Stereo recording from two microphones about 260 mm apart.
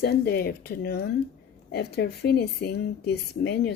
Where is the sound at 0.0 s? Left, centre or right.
Left.